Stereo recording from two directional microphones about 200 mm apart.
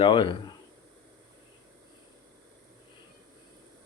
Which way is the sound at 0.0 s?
25° left (ahead or behind).